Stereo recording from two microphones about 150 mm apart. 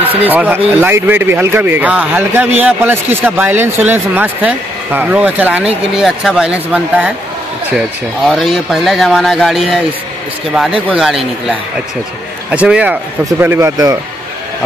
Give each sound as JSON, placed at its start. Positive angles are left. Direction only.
{"t": 0.1, "sound": "speech", "side_deg": -10}
{"t": 8.3, "sound": "speech", "side_deg": 0}
{"t": 10.9, "sound": "speech", "side_deg": 0}